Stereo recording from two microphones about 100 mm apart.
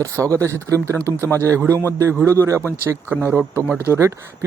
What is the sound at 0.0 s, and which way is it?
Speech, 30° right (ahead or behind).